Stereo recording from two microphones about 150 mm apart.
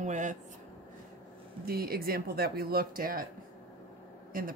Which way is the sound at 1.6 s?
90° right.